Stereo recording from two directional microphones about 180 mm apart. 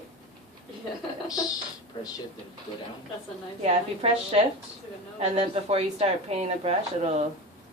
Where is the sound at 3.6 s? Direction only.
35° right (ahead or behind).